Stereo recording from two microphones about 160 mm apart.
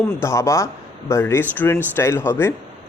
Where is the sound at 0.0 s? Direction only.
15° left (ahead or behind).